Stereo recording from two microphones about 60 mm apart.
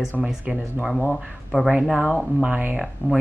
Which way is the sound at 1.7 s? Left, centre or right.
Centre.